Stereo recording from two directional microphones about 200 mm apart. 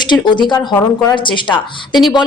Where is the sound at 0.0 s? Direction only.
25° left (ahead or behind).